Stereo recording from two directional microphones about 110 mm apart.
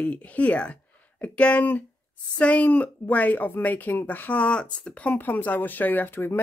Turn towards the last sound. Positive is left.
turn(degrees=20)  # may be behind; listen again after turning